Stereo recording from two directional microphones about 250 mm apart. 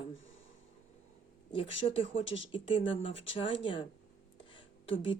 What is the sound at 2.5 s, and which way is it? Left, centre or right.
Speech, left.